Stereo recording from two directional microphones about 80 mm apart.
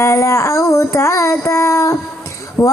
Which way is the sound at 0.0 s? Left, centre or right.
Left.